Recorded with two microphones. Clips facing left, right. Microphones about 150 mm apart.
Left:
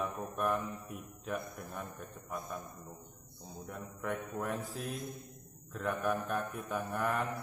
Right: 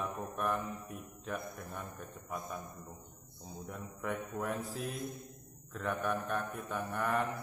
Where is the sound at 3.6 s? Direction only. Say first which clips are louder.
Even; centre (ahead or behind).